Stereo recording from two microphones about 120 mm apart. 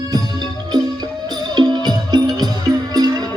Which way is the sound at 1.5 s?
35° right (ahead or behind).